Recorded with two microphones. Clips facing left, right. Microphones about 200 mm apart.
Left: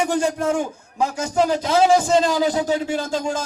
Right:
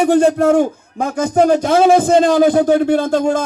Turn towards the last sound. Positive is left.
turn(degrees=-60)  # may be behind; listen again after turning